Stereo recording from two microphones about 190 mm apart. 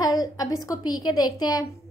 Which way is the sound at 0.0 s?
20° left (ahead or behind).